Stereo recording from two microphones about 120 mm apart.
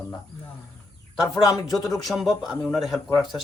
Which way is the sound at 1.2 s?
30° left (ahead or behind).